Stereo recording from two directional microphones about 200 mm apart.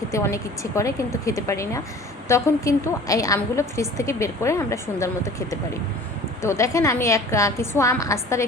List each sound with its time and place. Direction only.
0.1 s a woman's voice: 15° left (ahead or behind)